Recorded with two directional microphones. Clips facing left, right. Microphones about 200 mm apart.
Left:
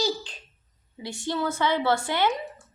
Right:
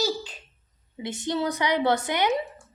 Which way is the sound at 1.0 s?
20° right (ahead or behind).